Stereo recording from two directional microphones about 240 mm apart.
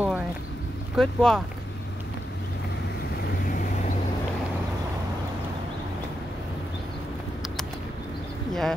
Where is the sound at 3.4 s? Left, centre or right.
Left.